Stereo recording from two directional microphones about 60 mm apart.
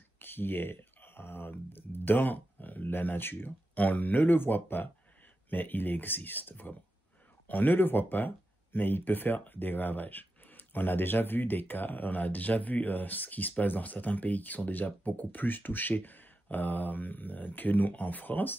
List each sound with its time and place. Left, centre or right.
0.2 s speech: left